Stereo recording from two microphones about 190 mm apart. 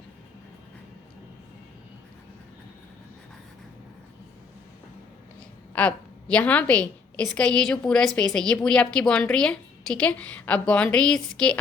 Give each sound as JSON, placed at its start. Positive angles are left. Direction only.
{"t": 5.7, "sound": "a woman's voice", "side_deg": 5}